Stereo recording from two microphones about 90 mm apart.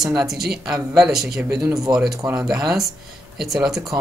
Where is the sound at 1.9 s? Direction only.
40° right (ahead or behind).